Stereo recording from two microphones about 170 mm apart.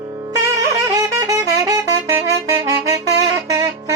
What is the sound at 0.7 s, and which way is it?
Wind instrument, 20° right (ahead or behind).